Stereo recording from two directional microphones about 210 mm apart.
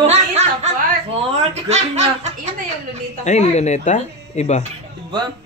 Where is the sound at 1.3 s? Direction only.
30° right (ahead or behind).